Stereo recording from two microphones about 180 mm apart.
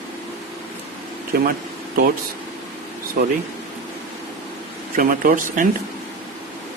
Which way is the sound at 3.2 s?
55° right (ahead or behind).